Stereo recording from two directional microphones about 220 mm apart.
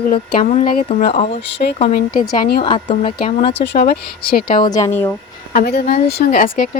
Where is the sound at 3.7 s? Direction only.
45° left (ahead or behind).